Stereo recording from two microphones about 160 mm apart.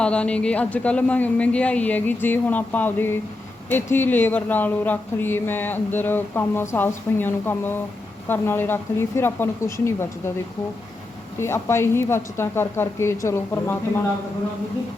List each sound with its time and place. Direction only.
0.0 s speech: 5° left (ahead or behind)
11.3 s speech: 15° left (ahead or behind)